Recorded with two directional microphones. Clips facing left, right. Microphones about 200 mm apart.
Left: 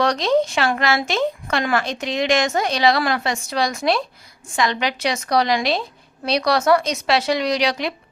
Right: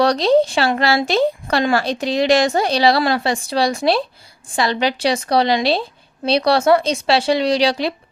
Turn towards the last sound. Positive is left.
turn(degrees=-30)  # may be behind; listen again after turning